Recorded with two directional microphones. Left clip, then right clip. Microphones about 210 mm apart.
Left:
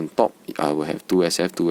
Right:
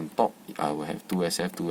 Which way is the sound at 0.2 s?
45° left (ahead or behind).